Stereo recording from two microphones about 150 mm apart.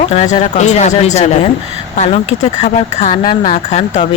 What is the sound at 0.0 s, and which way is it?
Speech, 45° left (ahead or behind).